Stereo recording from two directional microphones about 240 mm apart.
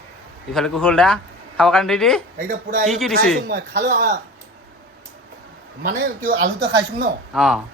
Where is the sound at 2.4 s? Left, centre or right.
Right.